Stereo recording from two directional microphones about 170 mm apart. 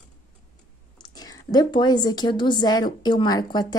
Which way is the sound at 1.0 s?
25° left (ahead or behind).